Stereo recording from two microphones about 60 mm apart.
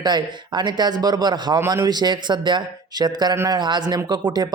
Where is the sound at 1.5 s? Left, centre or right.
Right.